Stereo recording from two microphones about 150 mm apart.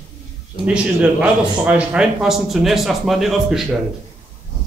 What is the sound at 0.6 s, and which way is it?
A man's voice, 10° right (ahead or behind).